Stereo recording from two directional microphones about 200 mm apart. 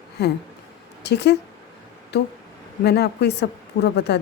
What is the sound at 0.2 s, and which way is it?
A woman's voice, 55° left (ahead or behind).